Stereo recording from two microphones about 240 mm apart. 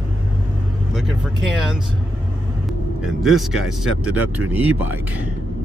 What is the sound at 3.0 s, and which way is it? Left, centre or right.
Speech, centre.